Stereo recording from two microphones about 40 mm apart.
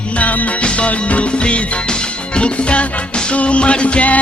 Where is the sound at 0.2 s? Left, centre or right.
Left.